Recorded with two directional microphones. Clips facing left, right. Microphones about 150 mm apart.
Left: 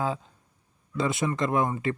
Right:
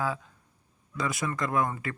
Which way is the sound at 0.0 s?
25° left (ahead or behind).